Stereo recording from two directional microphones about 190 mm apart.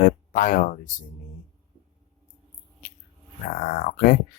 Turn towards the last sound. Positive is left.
turn(degrees=45)  # may be behind; listen again after turning